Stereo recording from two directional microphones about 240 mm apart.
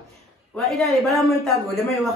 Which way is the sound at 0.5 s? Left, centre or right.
Centre.